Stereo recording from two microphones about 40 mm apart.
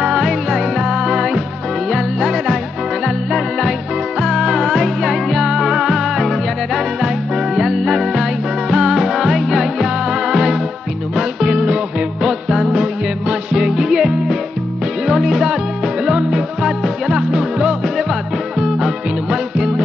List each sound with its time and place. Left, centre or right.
0.0 s music: centre
3.3 s music: centre; by 13.6 s right
13.6 s music: centre